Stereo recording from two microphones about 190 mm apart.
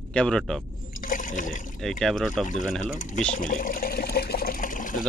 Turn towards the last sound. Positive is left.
turn(degrees=45)  # may be behind; listen again after turning